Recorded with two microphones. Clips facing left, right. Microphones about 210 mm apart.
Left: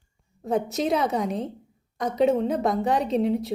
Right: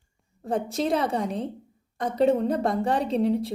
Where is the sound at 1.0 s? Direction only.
30° right (ahead or behind).